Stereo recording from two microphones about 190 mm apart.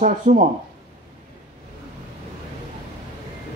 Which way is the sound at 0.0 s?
45° right (ahead or behind).